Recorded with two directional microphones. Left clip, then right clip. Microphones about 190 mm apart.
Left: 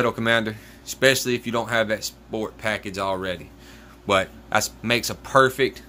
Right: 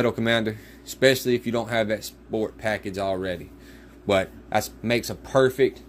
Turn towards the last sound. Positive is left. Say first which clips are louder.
# left 2 dB
turn(degrees=-10)  # may be behind; listen again after turning